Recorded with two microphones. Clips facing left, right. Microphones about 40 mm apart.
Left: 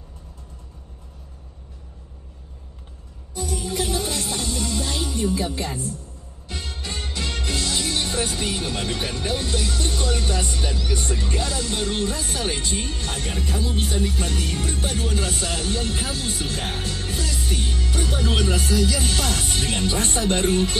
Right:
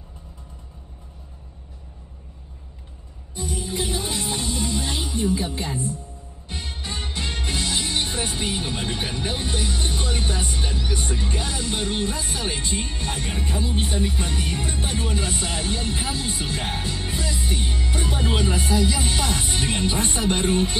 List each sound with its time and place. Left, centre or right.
3.3 s music: right